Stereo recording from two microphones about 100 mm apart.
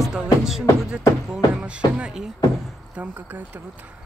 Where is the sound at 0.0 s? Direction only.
5° right (ahead or behind).